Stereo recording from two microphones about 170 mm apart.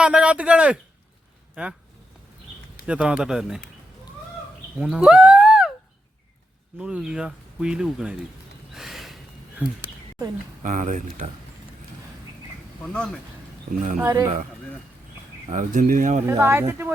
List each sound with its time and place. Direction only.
0.0 s speech: 5° right (ahead or behind)
2.8 s speech: 5° right (ahead or behind)
4.8 s speech: 5° right (ahead or behind)
6.7 s speech: 5° right (ahead or behind)
8.7 s a sound: centre (ahead or behind)
9.6 s speech: 10° right (ahead or behind)
10.6 s speech: 50° right (ahead or behind)
12.8 s speech: 5° left (ahead or behind)
14.0 s speech: 15° right (ahead or behind)
15.4 s speech: 50° right (ahead or behind)
16.2 s speech: 15° right (ahead or behind)